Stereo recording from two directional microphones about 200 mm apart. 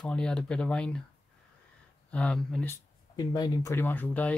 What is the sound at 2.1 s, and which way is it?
Speech, 5° left (ahead or behind).